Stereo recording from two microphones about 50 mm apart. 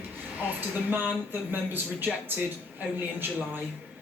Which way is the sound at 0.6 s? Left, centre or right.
Right.